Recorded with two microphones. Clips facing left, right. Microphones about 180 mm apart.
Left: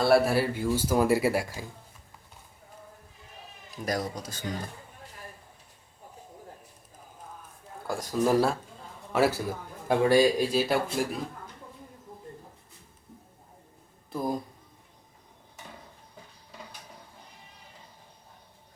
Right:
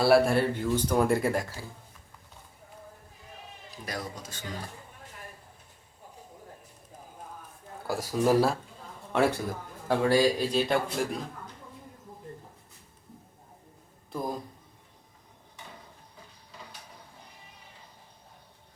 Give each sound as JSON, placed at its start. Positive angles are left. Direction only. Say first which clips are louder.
{"t": 0.0, "sound": "speech", "louder": "right 1 dB", "side_deg": 0}
{"t": 3.8, "sound": "speech", "louder": "left 6 dB", "side_deg": 40}
{"t": 7.9, "sound": "speech", "louder": "even", "side_deg": -5}
{"t": 9.9, "sound": "speech", "louder": "left 2 dB", "side_deg": 15}
{"t": 10.5, "sound": "speech", "louder": "left 1 dB", "side_deg": 5}
{"t": 14.1, "sound": "speech", "louder": "left 2 dB", "side_deg": 0}